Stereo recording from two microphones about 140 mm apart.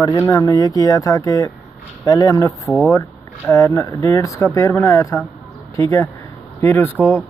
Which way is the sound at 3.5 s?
20° left (ahead or behind).